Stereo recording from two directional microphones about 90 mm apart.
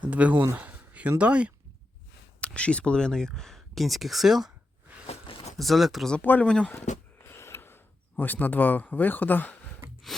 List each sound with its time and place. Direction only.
0.0 s speech: 15° right (ahead or behind)
0.5 s a sound: 20° right (ahead or behind)
1.2 s speech: 15° right (ahead or behind)
2.4 s speech: 10° left (ahead or behind); by 4.5 s 5° right (ahead or behind)
5.5 s speech: centre (ahead or behind)
6.1 s speech: 15° left (ahead or behind)
6.7 s a sound: 25° left (ahead or behind)
8.2 s speech: 20° left (ahead or behind)
10.1 s speech: 5° left (ahead or behind)